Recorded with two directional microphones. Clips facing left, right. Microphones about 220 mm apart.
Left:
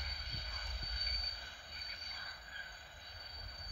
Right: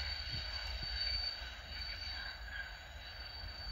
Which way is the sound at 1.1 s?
25° right (ahead or behind).